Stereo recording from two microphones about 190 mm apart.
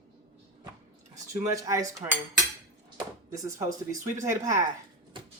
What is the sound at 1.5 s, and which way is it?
Speech, 15° right (ahead or behind).